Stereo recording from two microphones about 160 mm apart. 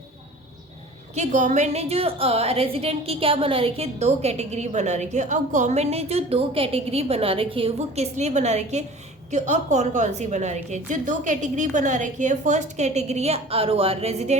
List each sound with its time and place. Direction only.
1.1 s a woman's voice: 50° right (ahead or behind)